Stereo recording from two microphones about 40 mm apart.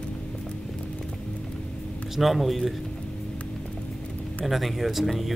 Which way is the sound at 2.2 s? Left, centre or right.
Centre.